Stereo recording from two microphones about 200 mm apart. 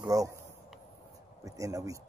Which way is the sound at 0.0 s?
15° right (ahead or behind).